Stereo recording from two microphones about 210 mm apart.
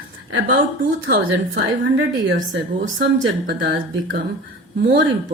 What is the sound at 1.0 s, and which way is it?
Speech, 50° right (ahead or behind).